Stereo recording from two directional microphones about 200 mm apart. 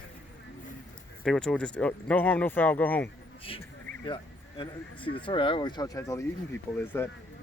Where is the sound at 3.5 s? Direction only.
25° left (ahead or behind); by 7.0 s 10° left (ahead or behind).